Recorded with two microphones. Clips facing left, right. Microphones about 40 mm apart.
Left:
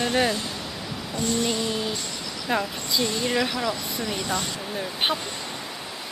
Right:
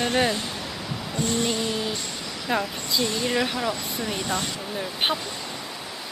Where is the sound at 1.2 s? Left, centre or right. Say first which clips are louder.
Even; right.